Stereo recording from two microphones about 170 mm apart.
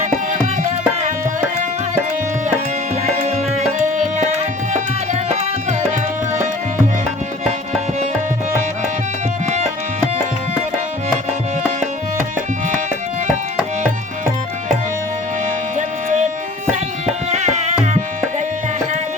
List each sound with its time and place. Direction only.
0.0 s tabla: 45° right (ahead or behind)
3.2 s tabla: 40° right (ahead or behind)
17.3 s tabla: 40° right (ahead or behind)